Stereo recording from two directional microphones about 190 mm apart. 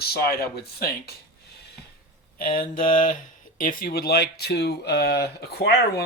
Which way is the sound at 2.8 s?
45° left (ahead or behind).